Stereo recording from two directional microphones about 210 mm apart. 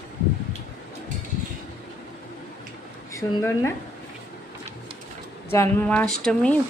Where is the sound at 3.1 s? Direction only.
15° left (ahead or behind).